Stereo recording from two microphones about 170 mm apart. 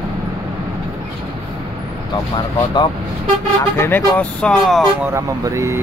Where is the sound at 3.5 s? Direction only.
10° left (ahead or behind).